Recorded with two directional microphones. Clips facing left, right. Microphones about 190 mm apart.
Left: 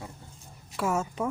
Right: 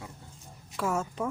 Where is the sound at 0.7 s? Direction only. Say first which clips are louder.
Left 2 dB; 5° left (ahead or behind).